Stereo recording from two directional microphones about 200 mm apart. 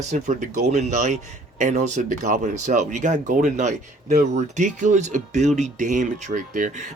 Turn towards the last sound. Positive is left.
turn(degrees=-40)  # may be behind; listen again after turning